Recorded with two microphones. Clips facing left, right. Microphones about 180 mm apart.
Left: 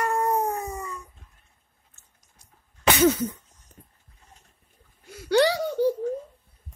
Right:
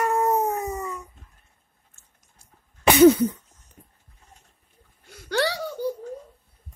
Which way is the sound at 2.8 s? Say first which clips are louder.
Right 6 dB; 25° right (ahead or behind).